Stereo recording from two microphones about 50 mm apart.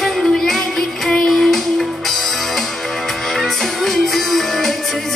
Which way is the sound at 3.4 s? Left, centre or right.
Centre.